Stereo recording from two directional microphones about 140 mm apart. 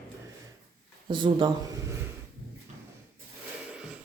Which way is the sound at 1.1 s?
35° right (ahead or behind).